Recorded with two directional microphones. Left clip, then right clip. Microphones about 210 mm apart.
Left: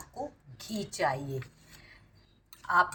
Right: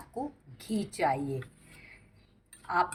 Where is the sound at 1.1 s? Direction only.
20° left (ahead or behind).